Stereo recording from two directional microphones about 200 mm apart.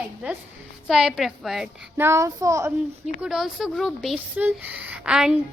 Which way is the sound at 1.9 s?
15° right (ahead or behind).